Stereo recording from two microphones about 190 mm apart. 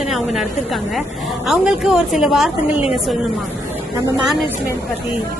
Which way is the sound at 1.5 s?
5° right (ahead or behind).